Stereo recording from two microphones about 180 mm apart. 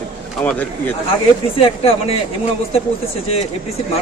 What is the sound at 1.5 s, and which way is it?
Speech, 30° left (ahead or behind).